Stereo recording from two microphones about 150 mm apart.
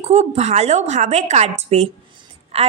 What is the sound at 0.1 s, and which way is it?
A woman's voice, 45° right (ahead or behind).